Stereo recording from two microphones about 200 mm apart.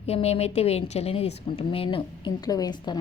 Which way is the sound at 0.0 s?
30° left (ahead or behind).